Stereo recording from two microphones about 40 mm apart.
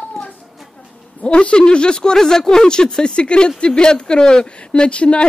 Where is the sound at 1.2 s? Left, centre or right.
Left.